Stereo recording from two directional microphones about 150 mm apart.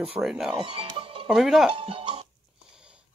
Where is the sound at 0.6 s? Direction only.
40° right (ahead or behind).